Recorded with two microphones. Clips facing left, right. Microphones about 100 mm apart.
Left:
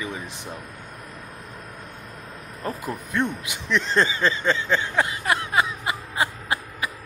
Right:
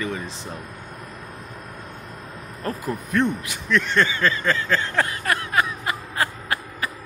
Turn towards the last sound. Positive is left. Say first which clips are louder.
# even
turn(degrees=15)  # may be behind; listen again after turning